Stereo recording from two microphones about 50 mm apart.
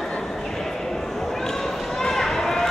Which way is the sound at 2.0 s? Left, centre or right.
Centre.